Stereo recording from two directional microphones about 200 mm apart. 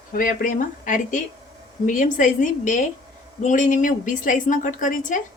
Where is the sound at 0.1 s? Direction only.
45° left (ahead or behind).